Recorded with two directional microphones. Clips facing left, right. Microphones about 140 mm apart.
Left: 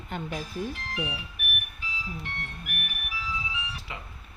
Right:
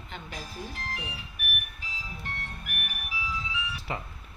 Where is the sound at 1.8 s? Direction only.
40° right (ahead or behind).